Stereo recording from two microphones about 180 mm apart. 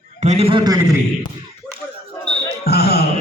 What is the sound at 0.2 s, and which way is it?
Speech, 35° right (ahead or behind).